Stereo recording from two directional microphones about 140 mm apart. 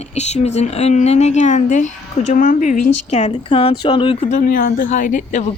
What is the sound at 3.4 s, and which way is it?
Speech, 40° left (ahead or behind).